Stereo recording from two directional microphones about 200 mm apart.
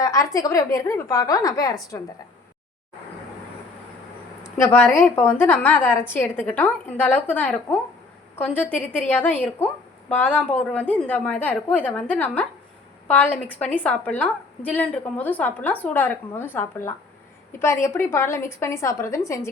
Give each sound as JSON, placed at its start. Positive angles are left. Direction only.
{"t": 0.0, "sound": "a woman's voice", "side_deg": 15}
{"t": 4.6, "sound": "a woman's voice", "side_deg": 10}